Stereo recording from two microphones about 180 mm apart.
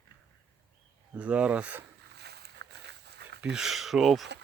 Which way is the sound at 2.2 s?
65° right (ahead or behind).